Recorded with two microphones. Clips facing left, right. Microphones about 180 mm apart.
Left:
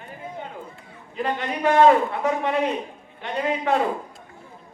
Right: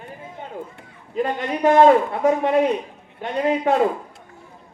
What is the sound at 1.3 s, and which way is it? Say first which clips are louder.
A man's voice: right 3 dB; 40° right (ahead or behind).